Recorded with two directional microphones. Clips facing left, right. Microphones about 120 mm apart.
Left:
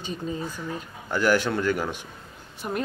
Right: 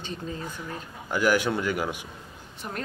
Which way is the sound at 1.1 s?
10° right (ahead or behind).